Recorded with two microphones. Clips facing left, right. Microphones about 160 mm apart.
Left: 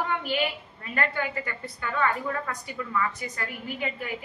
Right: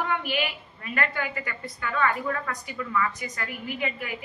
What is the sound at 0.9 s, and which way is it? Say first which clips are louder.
Speech: left 1 dB; 25° left (ahead or behind).